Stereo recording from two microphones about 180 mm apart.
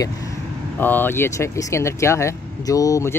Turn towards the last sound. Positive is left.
turn(degrees=15)  # may be behind; listen again after turning